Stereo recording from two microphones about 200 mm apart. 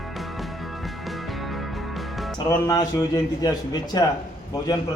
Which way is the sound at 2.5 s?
15° left (ahead or behind).